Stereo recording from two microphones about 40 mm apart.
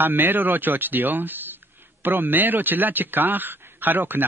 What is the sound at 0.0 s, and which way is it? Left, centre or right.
A man's voice, right.